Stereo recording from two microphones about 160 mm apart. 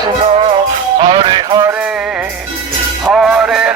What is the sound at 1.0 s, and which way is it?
Music, 30° right (ahead or behind).